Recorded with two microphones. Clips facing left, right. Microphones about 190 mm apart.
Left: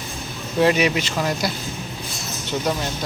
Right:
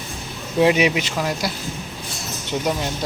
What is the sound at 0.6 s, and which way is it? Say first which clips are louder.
Speech: right 1 dB; 15° right (ahead or behind).